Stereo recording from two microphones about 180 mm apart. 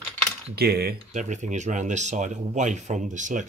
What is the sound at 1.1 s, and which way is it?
Speech, 40° right (ahead or behind).